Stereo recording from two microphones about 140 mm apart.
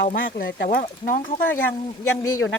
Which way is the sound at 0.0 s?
90° left.